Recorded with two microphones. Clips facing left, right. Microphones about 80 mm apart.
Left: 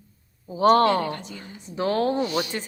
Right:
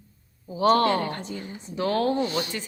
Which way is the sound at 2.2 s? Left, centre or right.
Right.